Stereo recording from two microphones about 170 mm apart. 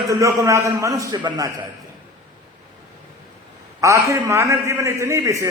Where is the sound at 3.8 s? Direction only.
20° right (ahead or behind).